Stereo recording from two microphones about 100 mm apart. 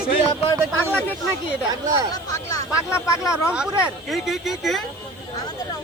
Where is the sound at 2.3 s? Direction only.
30° left (ahead or behind).